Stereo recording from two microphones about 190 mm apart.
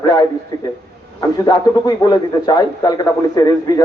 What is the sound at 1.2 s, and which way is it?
A man's voice, 20° left (ahead or behind).